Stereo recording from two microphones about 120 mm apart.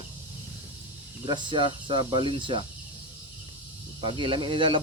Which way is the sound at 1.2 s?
40° right (ahead or behind).